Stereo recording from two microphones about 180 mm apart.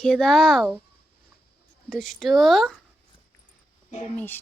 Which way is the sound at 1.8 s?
5° left (ahead or behind).